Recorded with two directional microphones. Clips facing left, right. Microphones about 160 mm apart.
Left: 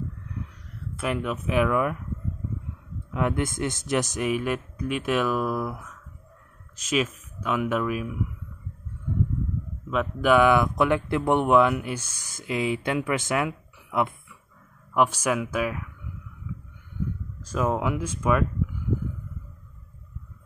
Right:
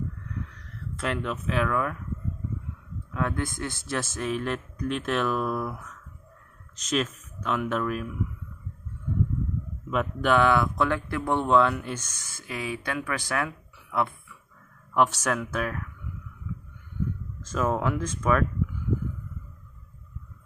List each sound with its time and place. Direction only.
0.9 s speech: 10° left (ahead or behind)
3.1 s speech: 15° left (ahead or behind)
9.8 s speech: centre (ahead or behind)
10.3 s speech: 15° left (ahead or behind)
17.5 s speech: 10° left (ahead or behind)